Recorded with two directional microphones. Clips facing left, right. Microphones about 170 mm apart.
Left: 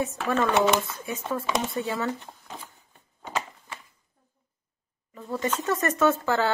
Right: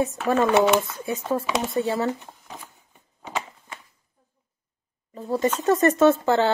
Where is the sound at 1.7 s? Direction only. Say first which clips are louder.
Right 5 dB; 35° right (ahead or behind).